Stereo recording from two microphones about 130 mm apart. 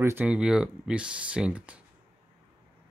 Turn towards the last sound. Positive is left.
turn(degrees=-10)  # may be behind; listen again after turning